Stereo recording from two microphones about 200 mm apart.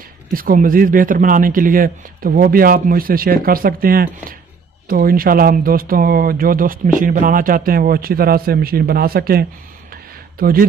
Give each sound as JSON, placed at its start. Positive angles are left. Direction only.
{"t": 0.3, "sound": "speech", "side_deg": -45}